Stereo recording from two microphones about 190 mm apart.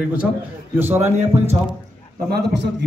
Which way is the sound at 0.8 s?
10° right (ahead or behind).